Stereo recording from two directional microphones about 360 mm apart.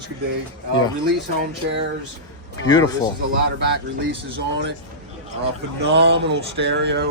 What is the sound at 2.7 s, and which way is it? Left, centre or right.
Speech, centre.